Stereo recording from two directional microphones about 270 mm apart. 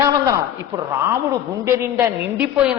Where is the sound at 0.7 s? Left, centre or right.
Centre.